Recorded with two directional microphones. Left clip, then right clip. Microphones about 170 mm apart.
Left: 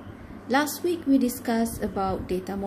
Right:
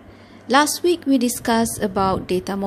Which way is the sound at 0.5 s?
45° right (ahead or behind).